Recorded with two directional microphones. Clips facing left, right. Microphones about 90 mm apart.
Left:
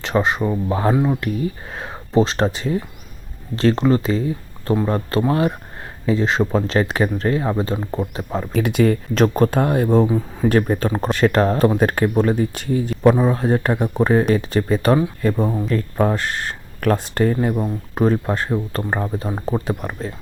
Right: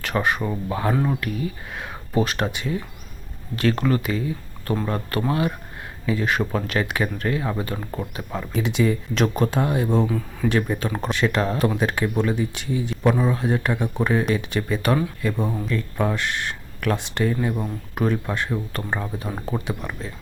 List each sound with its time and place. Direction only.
0.0 s speech: 20° left (ahead or behind)
5.3 s speech: 35° left (ahead or behind)
8.5 s speech: 55° left (ahead or behind)
9.1 s speech: 40° left (ahead or behind)
10.1 s speech: 25° left (ahead or behind)
10.5 s speech: 40° left (ahead or behind)
17.5 s speech: 30° left (ahead or behind)